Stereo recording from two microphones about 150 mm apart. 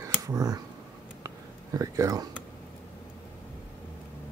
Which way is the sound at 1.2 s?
20° right (ahead or behind).